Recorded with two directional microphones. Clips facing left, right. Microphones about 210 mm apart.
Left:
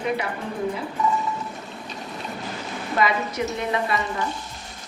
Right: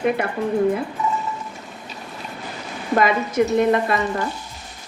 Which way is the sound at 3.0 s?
50° right (ahead or behind).